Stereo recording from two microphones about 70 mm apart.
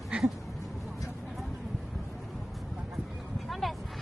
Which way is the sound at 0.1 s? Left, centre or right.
Centre.